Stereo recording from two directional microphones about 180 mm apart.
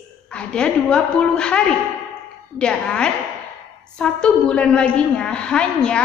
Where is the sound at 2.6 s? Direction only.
5° left (ahead or behind).